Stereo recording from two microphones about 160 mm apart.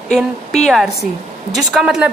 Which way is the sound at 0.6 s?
Centre (ahead or behind).